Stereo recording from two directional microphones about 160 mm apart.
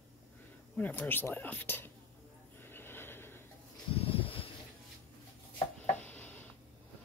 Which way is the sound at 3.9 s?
35° left (ahead or behind).